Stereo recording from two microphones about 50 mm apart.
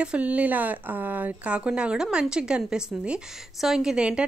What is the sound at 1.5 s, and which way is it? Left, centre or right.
Speech, right.